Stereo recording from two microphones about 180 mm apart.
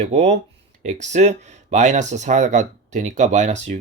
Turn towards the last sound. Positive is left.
turn(degrees=-40)  # may be behind; listen again after turning